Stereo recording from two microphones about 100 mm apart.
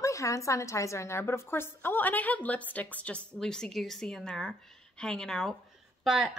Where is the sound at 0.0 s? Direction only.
30° left (ahead or behind).